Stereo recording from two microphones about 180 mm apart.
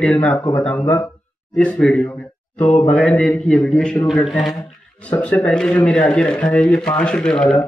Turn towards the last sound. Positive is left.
turn(degrees=5)  # may be behind; listen again after turning